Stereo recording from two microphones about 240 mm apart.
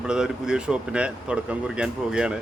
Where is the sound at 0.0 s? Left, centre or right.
Centre.